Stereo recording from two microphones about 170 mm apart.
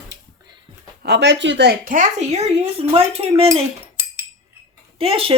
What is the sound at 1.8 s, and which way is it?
A woman's voice, 50° right (ahead or behind).